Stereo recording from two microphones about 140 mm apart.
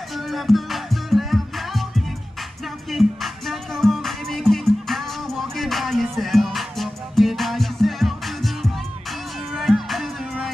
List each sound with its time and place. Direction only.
0.3 s music: centre (ahead or behind)